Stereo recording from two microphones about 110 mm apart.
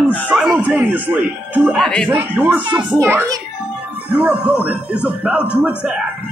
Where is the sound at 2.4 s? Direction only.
15° right (ahead or behind).